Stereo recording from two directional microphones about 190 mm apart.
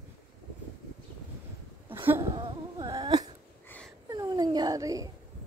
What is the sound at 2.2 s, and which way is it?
Insect, 25° right (ahead or behind).